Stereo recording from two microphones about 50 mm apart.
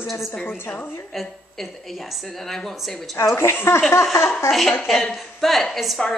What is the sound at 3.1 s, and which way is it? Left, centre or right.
Speech, left.